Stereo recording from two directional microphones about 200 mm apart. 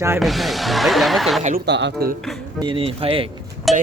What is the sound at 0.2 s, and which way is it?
Speech, centre (ahead or behind).